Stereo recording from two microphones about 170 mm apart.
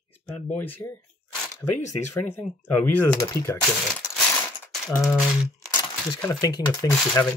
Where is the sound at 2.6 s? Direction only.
10° left (ahead or behind).